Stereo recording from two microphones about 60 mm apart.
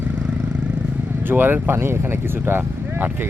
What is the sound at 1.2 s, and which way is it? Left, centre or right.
Speech, right.